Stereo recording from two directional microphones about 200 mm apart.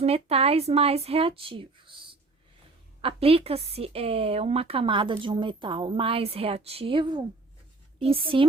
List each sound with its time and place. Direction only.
0.0 s speech: 30° right (ahead or behind)
3.0 s a woman's voice: 30° right (ahead or behind)